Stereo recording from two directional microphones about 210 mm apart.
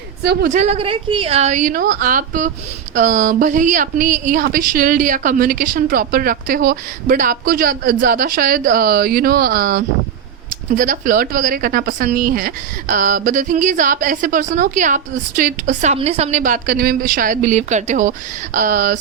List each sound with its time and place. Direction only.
0.2 s a woman's voice: 50° right (ahead or behind)
0.5 s a woman's voice: 30° right (ahead or behind)